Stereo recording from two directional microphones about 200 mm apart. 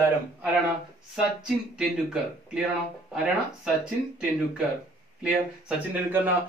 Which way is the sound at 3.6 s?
5° right (ahead or behind).